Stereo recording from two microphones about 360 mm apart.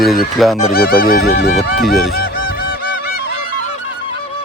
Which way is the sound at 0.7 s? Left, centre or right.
Left.